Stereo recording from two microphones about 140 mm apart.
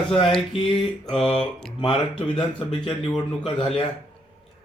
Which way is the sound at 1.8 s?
35° left (ahead or behind).